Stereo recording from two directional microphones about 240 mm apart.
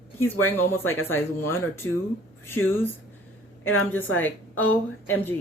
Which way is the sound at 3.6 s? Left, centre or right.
Left.